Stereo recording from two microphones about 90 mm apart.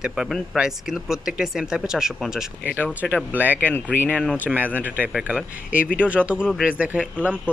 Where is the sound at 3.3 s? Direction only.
20° right (ahead or behind).